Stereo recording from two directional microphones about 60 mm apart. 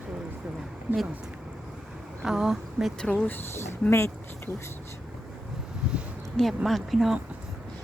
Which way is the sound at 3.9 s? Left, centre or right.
Left.